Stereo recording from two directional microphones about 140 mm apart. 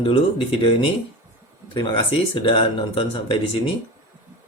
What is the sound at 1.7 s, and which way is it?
Speech, 35° left (ahead or behind).